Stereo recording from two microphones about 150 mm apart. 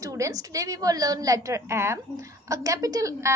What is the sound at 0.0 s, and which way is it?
A woman's voice, 20° right (ahead or behind).